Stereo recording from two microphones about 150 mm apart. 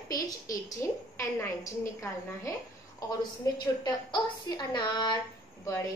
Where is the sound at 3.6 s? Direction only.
25° left (ahead or behind).